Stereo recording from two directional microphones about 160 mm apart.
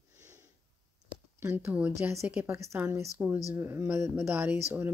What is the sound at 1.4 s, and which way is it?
Speech, 10° right (ahead or behind).